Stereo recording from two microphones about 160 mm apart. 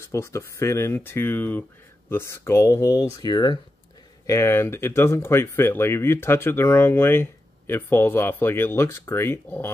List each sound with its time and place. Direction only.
0.0 s speech: 15° left (ahead or behind)